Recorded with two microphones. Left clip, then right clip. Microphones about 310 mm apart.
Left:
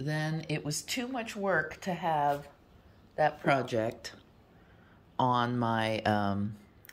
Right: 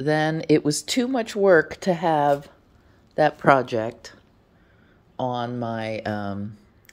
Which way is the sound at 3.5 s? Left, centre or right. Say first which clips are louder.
Right 10 dB; centre.